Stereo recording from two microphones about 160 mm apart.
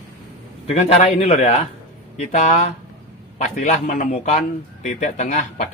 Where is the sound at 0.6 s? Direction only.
40° left (ahead or behind).